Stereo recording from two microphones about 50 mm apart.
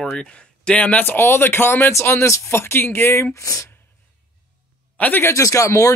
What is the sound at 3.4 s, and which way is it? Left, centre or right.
Speech, left.